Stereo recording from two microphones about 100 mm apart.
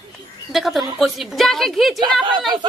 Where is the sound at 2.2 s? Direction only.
50° right (ahead or behind).